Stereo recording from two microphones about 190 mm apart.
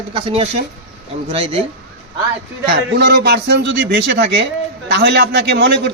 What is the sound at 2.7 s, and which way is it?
Speech, 60° right (ahead or behind).